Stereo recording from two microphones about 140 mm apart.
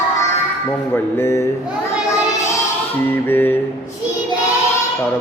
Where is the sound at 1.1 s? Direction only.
20° left (ahead or behind).